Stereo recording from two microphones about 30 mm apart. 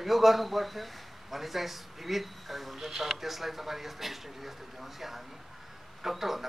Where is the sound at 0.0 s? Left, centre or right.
Centre.